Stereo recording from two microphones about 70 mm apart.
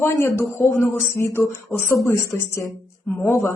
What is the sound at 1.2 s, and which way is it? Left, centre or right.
Speech, left.